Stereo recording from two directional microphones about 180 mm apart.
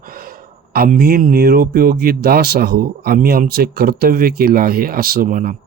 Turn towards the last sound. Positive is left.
turn(degrees=-50)  # may be behind; listen again after turning